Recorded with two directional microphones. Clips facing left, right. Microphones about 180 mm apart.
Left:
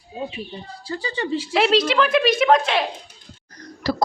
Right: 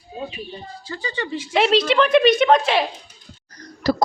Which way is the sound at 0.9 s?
30° left (ahead or behind).